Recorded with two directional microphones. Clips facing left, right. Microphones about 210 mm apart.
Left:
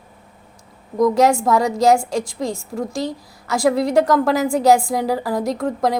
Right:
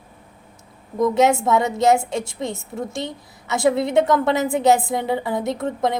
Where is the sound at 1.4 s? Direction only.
Centre (ahead or behind).